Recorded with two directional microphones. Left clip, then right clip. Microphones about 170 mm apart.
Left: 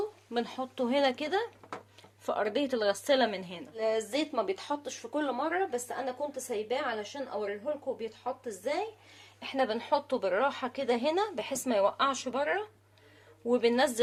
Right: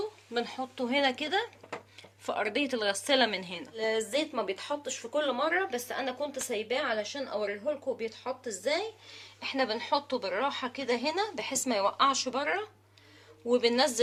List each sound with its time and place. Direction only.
0.3 s speech: 45° left (ahead or behind); by 3.6 s 25° left (ahead or behind)
3.8 s speech: 40° left (ahead or behind)
9.4 s speech: 45° left (ahead or behind)